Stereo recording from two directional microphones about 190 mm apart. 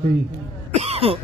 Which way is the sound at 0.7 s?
35° right (ahead or behind).